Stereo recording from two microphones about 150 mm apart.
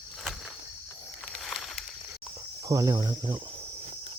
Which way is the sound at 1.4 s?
Centre (ahead or behind).